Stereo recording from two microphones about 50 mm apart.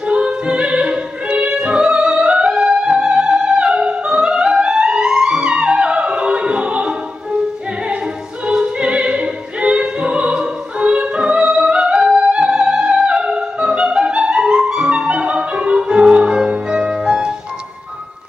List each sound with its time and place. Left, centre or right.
0.0 s opera: centre
8.5 s opera: right